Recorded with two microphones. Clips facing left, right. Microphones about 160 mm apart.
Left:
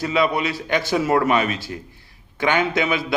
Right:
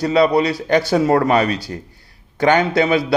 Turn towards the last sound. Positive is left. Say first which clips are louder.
# right 6 dB
turn(degrees=-35)  # may be behind; listen again after turning